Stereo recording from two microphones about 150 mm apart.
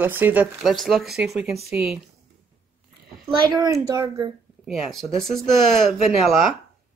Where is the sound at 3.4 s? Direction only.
25° right (ahead or behind).